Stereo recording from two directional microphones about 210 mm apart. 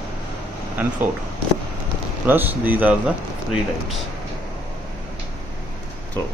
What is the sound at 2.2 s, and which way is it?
Speech, 10° right (ahead or behind).